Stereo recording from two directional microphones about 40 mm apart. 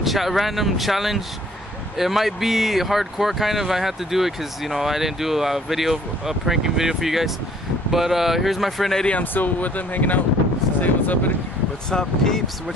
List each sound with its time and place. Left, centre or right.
0.0 s speech: centre
9.2 s speech: left
11.9 s speech: centre